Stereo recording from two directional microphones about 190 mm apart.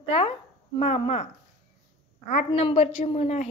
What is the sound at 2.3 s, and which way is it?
A woman's voice, 30° left (ahead or behind).